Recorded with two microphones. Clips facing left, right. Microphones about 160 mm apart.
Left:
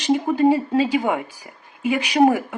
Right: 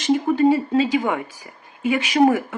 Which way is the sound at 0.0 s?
15° left (ahead or behind).